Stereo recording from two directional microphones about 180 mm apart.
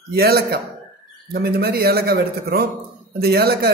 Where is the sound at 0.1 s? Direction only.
60° right (ahead or behind).